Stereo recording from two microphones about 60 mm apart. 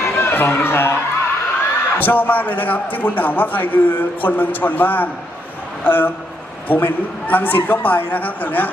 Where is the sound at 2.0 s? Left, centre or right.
Left.